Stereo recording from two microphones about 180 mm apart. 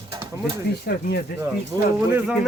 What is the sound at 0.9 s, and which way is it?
Speech, 65° left (ahead or behind).